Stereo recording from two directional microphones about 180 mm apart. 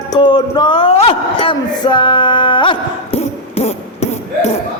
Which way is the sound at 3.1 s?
35° left (ahead or behind).